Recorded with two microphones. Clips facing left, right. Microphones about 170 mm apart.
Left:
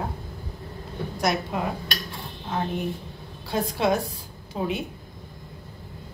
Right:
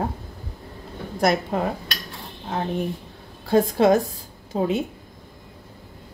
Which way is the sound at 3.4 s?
50° right (ahead or behind).